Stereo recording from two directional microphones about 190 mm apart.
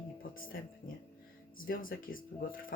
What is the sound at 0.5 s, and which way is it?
A woman's voice, 55° left (ahead or behind).